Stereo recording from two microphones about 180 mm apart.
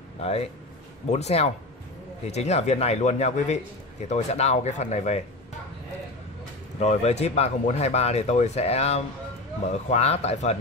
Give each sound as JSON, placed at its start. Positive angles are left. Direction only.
{"t": 0.2, "sound": "speech", "side_deg": 35}
{"t": 6.8, "sound": "speech", "side_deg": 35}